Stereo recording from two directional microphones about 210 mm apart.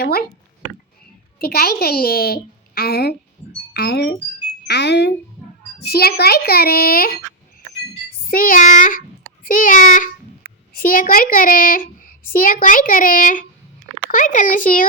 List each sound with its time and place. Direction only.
0.0 s a woman's voice: 45° left (ahead or behind)
1.4 s a woman's voice: 45° left (ahead or behind)
8.3 s a child's voice: 40° left (ahead or behind)